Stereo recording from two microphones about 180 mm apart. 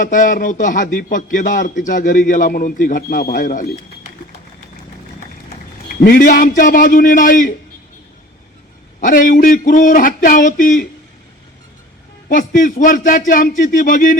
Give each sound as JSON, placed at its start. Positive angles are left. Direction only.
{"t": 0.0, "sound": "a man's voice", "side_deg": 50}
{"t": 6.0, "sound": "a man's voice", "side_deg": 55}
{"t": 9.0, "sound": "a man's voice", "side_deg": 50}
{"t": 12.3, "sound": "a man's voice", "side_deg": 45}